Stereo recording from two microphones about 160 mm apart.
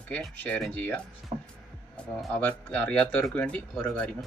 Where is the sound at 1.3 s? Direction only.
35° right (ahead or behind).